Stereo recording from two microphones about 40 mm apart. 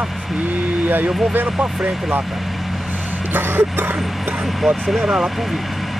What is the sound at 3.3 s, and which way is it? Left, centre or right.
Speech, right.